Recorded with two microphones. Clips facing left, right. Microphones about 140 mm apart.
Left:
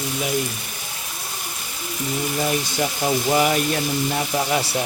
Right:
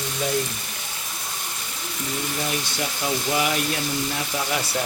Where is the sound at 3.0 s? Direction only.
40° left (ahead or behind).